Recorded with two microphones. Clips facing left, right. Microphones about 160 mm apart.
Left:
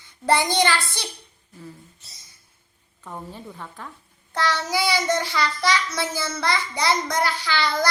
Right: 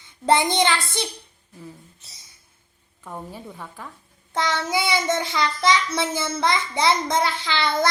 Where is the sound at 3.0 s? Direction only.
10° right (ahead or behind).